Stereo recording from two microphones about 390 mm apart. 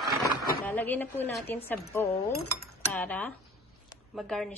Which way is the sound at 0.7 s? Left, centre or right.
Centre.